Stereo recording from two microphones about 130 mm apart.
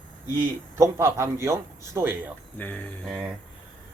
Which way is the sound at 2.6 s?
10° left (ahead or behind).